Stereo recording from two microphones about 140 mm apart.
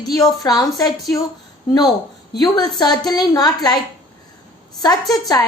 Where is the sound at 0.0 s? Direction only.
25° left (ahead or behind).